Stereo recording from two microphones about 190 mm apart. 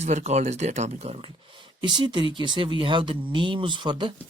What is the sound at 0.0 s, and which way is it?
Speech, 35° right (ahead or behind).